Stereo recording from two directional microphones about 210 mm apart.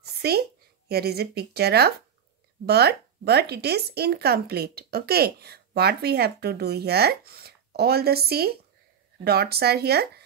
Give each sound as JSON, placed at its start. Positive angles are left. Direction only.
{"t": 0.0, "sound": "a woman's voice", "side_deg": -50}